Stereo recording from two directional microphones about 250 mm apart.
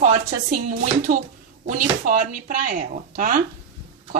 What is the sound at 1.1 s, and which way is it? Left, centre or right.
Speech, right.